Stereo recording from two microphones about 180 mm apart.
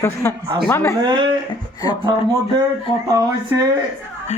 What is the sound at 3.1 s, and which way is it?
Speech, 20° right (ahead or behind).